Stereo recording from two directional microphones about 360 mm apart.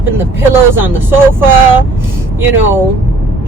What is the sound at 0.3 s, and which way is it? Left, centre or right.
Speech, centre.